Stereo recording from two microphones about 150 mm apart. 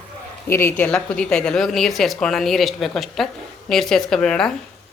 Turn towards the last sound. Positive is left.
turn(degrees=5)  # may be behind; listen again after turning